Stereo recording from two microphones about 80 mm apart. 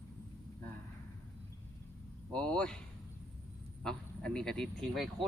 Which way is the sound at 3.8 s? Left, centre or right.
Centre.